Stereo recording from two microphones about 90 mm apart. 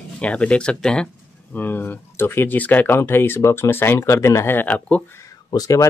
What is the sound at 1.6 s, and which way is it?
Speech, 20° left (ahead or behind).